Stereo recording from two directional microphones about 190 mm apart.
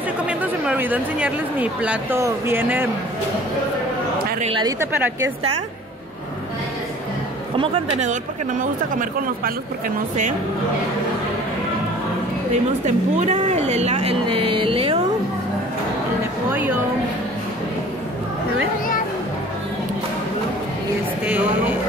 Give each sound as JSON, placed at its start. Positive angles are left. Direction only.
{"t": 0.3, "sound": "speech", "side_deg": -5}
{"t": 4.4, "sound": "speech", "side_deg": -25}
{"t": 4.7, "sound": "a woman's voice", "side_deg": -15}
{"t": 7.5, "sound": "speech", "side_deg": -25}
{"t": 8.0, "sound": "speech", "side_deg": -45}
{"t": 12.8, "sound": "speech", "side_deg": -40}
{"t": 21.3, "sound": "a woman's voice", "side_deg": -10}